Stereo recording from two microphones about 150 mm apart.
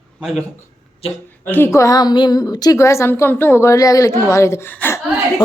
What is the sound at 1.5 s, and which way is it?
A woman's voice, 15° left (ahead or behind).